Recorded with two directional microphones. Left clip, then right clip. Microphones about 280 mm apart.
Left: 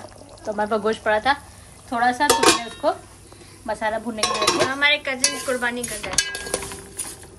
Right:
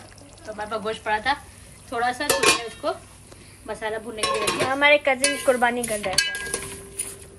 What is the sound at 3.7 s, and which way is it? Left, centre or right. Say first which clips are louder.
Speech: left 5 dB; left.